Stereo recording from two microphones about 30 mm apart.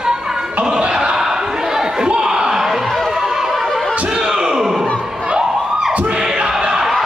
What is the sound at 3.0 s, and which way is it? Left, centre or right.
Run, centre.